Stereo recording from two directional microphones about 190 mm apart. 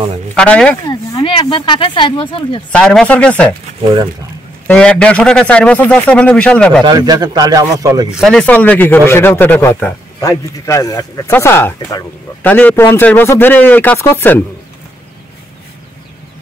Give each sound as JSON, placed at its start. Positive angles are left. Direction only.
{"t": 0.3, "sound": "speech", "side_deg": 5}
{"t": 0.8, "sound": "speech", "side_deg": 25}
{"t": 2.7, "sound": "a man's voice", "side_deg": 5}
{"t": 4.6, "sound": "a man's voice", "side_deg": 5}
{"t": 6.9, "sound": "a man's voice", "side_deg": -20}
{"t": 8.1, "sound": "speech", "side_deg": 0}